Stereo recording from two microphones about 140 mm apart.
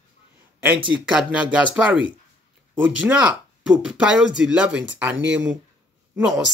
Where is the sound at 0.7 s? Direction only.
35° right (ahead or behind).